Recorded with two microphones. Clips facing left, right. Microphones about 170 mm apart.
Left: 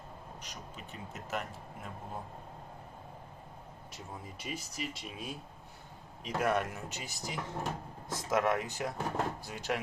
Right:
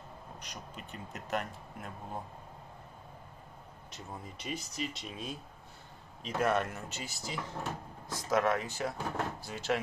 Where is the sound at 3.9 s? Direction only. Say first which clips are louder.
Right 1 dB; 5° left (ahead or behind).